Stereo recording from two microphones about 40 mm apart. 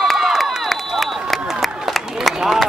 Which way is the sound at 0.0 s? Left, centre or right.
Centre.